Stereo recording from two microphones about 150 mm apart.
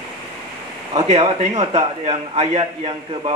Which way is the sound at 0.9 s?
40° right (ahead or behind).